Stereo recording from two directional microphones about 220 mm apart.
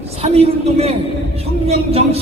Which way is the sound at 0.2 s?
25° right (ahead or behind).